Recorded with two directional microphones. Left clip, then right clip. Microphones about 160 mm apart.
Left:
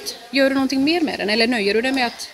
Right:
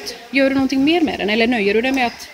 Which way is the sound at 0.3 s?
10° left (ahead or behind).